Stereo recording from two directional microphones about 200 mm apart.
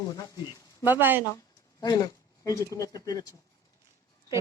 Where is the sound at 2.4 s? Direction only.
15° left (ahead or behind).